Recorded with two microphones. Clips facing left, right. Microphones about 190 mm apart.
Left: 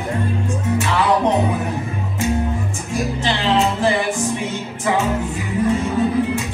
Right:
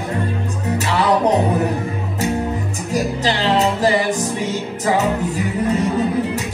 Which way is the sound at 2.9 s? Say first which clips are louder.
Right 2 dB; 35° right (ahead or behind).